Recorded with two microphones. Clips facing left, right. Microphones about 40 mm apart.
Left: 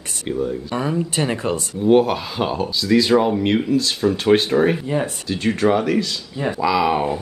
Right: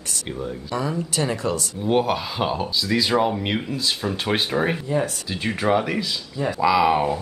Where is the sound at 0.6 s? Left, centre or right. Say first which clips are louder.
Left 3 dB; left.